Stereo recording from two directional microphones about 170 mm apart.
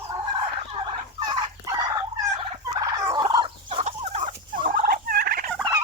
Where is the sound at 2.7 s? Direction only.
20° right (ahead or behind); by 5.4 s 60° right (ahead or behind).